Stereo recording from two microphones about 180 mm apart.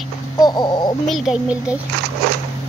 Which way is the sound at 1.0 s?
Centre (ahead or behind).